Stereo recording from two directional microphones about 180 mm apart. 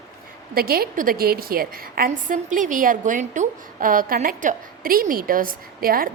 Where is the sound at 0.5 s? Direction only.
55° right (ahead or behind).